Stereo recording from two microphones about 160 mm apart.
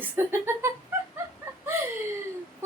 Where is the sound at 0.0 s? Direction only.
15° right (ahead or behind).